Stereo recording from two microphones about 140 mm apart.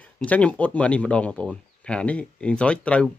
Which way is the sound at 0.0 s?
10° left (ahead or behind).